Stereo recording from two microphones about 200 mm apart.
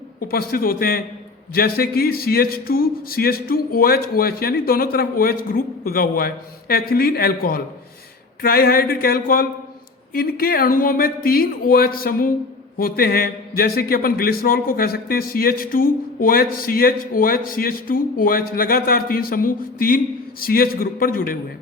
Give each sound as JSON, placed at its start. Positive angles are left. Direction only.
{"t": 0.3, "sound": "a man's voice", "side_deg": 45}